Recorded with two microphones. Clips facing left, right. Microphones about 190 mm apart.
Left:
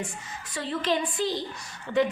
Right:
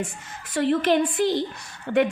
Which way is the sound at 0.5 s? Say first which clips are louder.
Right 8 dB; 60° right (ahead or behind).